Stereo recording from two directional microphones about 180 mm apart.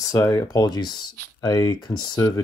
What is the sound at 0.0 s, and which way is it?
Speech, 15° left (ahead or behind).